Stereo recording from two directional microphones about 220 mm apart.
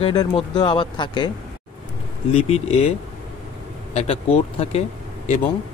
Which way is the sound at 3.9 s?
30° left (ahead or behind).